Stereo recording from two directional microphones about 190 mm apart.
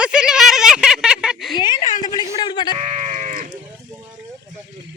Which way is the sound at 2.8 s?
35° right (ahead or behind).